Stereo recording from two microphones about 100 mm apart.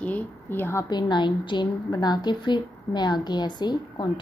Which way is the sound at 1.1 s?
50° left (ahead or behind).